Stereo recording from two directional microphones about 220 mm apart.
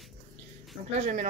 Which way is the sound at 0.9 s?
30° right (ahead or behind).